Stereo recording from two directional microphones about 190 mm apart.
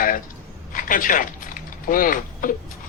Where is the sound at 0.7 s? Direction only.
45° left (ahead or behind).